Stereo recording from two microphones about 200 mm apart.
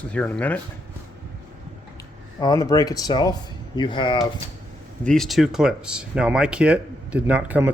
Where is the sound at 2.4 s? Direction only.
20° left (ahead or behind).